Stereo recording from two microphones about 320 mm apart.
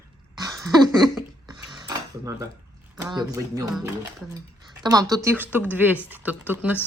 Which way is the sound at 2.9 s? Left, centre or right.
Centre.